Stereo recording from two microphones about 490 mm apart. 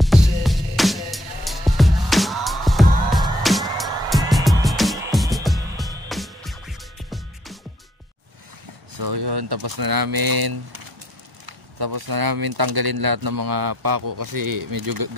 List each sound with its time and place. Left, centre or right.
0.0 s music: centre
8.9 s speech: right